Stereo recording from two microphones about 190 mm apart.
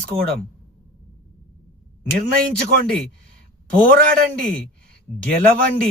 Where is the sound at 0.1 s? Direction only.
15° right (ahead or behind).